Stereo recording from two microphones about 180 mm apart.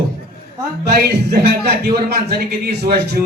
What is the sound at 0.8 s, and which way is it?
A man's voice, 65° right (ahead or behind).